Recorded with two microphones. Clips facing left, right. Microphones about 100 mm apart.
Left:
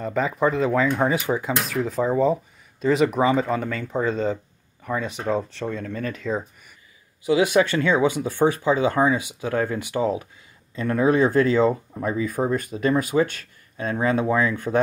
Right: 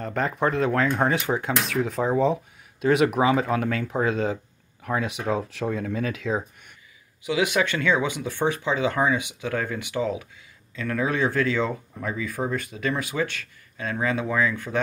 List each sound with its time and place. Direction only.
0.0 s speech: centre (ahead or behind)
7.2 s speech: 35° left (ahead or behind)
11.7 s speech: 25° left (ahead or behind)
12.3 s speech: 15° left (ahead or behind)
12.5 s speech: 40° left (ahead or behind)
14.7 s speech: 40° left (ahead or behind)